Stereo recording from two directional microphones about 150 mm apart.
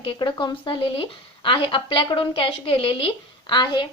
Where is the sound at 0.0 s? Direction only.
35° left (ahead or behind).